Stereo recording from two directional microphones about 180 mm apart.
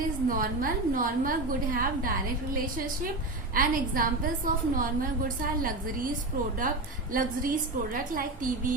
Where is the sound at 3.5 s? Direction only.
50° right (ahead or behind).